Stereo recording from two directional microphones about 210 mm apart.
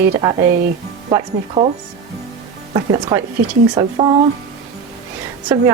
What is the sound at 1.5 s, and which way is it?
Speech, 30° right (ahead or behind).